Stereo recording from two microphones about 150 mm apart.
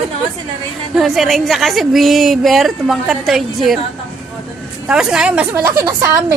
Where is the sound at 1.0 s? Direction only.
Centre (ahead or behind).